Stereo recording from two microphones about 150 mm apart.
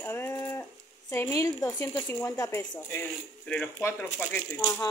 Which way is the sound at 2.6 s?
10° left (ahead or behind).